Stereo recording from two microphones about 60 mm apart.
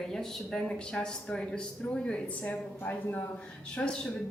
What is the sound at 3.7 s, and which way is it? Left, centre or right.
Speech, centre.